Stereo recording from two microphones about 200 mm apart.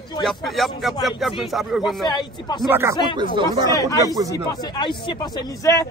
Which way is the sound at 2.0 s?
20° left (ahead or behind).